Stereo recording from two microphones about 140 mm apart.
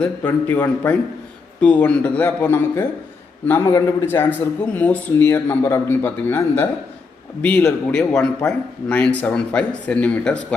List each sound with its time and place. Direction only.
0.0 s speech: 15° left (ahead or behind)